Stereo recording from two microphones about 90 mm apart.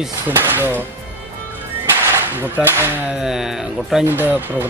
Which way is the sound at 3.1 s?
5° right (ahead or behind).